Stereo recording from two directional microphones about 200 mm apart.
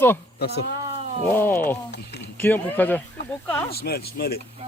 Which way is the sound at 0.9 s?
30° right (ahead or behind).